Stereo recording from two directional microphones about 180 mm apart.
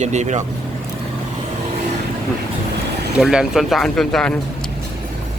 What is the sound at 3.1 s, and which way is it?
Speech, 5° right (ahead or behind).